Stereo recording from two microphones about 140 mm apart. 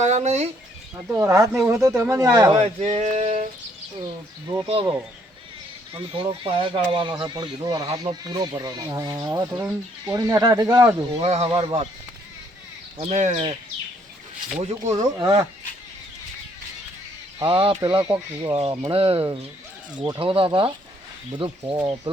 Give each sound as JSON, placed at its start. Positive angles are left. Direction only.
{"t": 0.0, "sound": "speech", "side_deg": -50}
{"t": 1.1, "sound": "speech", "side_deg": -20}
{"t": 2.6, "sound": "male singing", "side_deg": -50}
{"t": 4.0, "sound": "speech", "side_deg": -30}
{"t": 11.2, "sound": "speech", "side_deg": -50}
{"t": 11.4, "sound": "speech", "side_deg": -40}
{"t": 13.0, "sound": "speech", "side_deg": -50}
{"t": 14.6, "sound": "speech", "side_deg": -55}
{"t": 17.4, "sound": "speech", "side_deg": -35}
{"t": 18.5, "sound": "speech", "side_deg": -40}